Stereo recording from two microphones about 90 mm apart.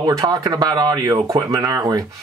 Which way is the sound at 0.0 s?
45° right (ahead or behind).